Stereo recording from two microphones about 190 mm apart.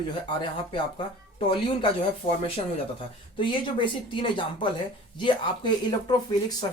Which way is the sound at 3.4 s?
25° left (ahead or behind).